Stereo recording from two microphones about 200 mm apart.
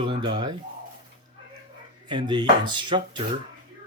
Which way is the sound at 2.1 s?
20° right (ahead or behind).